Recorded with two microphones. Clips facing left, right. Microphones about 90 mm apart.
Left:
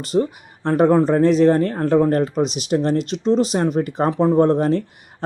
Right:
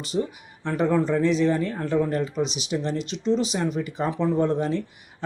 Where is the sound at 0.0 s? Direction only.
45° left (ahead or behind).